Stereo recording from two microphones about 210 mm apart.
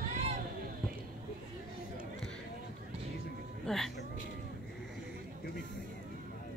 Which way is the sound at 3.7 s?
Centre (ahead or behind).